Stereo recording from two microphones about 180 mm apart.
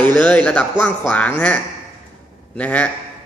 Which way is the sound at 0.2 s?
5° left (ahead or behind).